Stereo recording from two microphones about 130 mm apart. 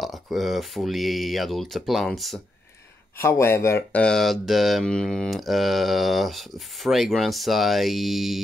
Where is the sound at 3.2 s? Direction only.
20° left (ahead or behind).